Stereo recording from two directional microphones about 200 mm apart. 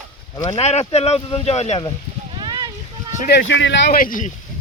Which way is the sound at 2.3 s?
20° right (ahead or behind).